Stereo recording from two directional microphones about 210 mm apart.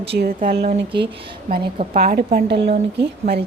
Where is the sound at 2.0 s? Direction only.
45° right (ahead or behind).